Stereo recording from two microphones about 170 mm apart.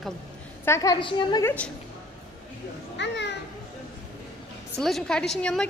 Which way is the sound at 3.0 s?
90° left.